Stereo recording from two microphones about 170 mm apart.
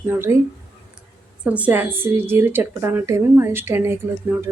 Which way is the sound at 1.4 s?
10° right (ahead or behind).